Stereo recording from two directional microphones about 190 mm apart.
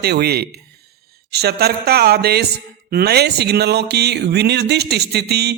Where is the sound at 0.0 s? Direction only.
55° right (ahead or behind).